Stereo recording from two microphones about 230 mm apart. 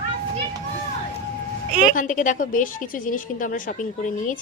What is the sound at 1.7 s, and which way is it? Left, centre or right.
Speech, right.